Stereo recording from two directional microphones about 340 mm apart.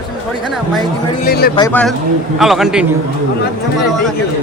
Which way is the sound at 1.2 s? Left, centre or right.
Left.